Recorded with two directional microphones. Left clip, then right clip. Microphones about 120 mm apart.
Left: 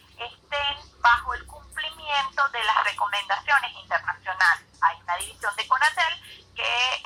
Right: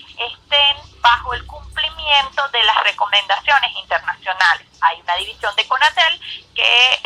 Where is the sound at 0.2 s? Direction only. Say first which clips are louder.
Right 13 dB; 20° right (ahead or behind).